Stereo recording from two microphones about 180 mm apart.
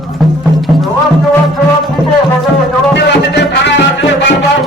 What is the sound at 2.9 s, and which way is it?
Music, 70° left (ahead or behind).